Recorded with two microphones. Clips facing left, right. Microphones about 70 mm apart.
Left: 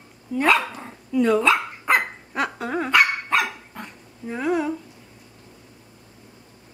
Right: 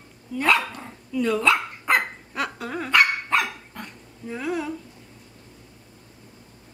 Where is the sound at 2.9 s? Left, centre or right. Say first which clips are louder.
Even; centre.